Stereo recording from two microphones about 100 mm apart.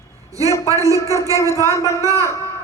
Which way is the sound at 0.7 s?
30° right (ahead or behind).